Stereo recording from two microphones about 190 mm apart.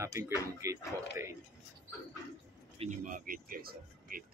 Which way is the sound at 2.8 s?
40° right (ahead or behind).